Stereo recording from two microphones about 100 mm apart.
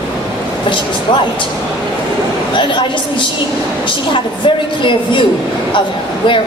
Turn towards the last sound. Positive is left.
turn(degrees=55)  # may be behind; listen again after turning